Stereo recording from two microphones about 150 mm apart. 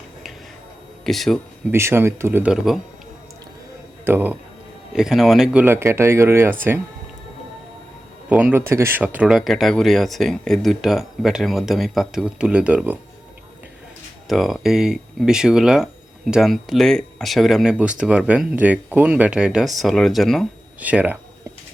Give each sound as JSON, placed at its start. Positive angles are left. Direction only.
{"t": 1.0, "sound": "speech", "side_deg": 0}
{"t": 1.7, "sound": "speech", "side_deg": -15}
{"t": 4.0, "sound": "speech", "side_deg": -15}
{"t": 4.9, "sound": "speech", "side_deg": -5}
{"t": 8.3, "sound": "speech", "side_deg": -10}
{"t": 14.3, "sound": "speech", "side_deg": 0}
{"t": 20.7, "sound": "speech", "side_deg": -10}